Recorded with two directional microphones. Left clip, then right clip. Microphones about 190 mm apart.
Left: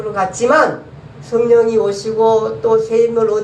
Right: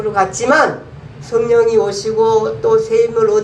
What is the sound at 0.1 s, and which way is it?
A woman's voice, 50° right (ahead or behind).